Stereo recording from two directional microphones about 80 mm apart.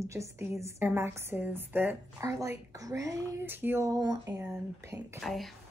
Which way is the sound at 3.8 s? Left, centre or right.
Right.